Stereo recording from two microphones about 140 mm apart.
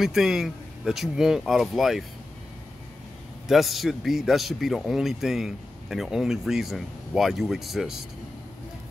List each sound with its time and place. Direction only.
0.0 s speech: 5° right (ahead or behind)
3.4 s speech: centre (ahead or behind)